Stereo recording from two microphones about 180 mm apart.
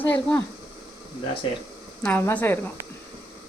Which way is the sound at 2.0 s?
10° left (ahead or behind).